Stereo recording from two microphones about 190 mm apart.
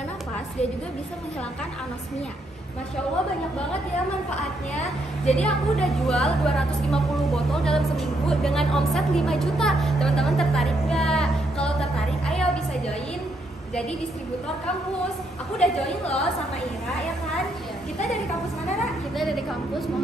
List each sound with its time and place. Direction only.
5.3 s a woman's voice: 5° left (ahead or behind)
15.6 s a woman's voice: centre (ahead or behind)